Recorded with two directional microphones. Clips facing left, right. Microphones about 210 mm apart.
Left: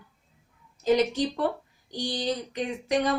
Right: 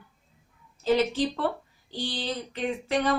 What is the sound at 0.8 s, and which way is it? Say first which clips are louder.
Speech: left 1 dB; 15° left (ahead or behind).